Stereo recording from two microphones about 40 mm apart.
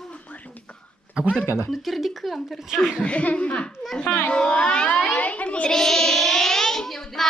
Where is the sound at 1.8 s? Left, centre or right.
Centre.